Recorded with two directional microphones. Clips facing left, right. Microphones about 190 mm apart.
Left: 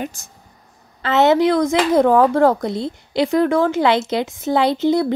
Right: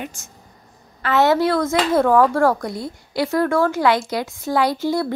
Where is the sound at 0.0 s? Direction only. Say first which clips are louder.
Left 4 dB; 35° left (ahead or behind).